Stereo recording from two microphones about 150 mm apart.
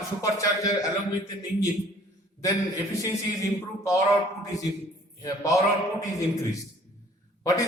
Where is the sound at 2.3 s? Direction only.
20° left (ahead or behind).